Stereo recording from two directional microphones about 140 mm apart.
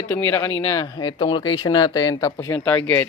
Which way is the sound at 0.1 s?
15° left (ahead or behind).